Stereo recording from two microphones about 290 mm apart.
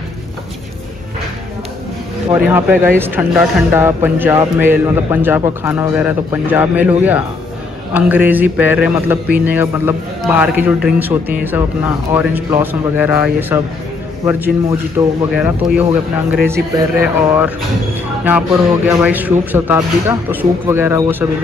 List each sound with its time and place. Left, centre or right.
2.5 s a man's voice: centre
18.9 s speech: centre